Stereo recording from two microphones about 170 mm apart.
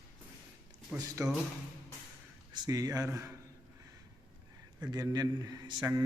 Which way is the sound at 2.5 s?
25° right (ahead or behind).